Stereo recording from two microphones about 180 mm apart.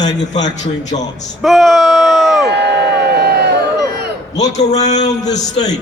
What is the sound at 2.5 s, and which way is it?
Crowd, 70° right (ahead or behind).